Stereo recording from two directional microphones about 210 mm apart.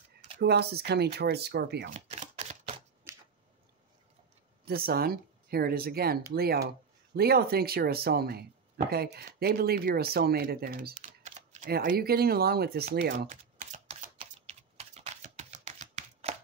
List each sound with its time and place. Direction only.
0.4 s speech: 50° right (ahead or behind)
2.0 s camera: 35° right (ahead or behind)
3.1 s a sound: 15° right (ahead or behind)
4.6 s speech: 45° right (ahead or behind)
11.2 s speech: 35° right (ahead or behind); by 13.3 s 50° right (ahead or behind)
13.3 s typing: 35° right (ahead or behind)